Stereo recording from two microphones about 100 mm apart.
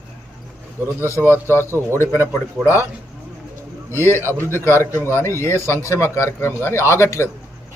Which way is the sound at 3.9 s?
25° left (ahead or behind).